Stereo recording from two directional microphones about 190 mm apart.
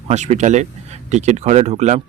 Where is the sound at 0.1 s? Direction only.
35° right (ahead or behind).